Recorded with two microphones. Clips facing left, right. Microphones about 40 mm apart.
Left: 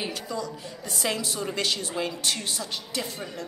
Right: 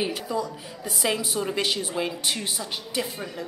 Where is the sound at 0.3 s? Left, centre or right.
Centre.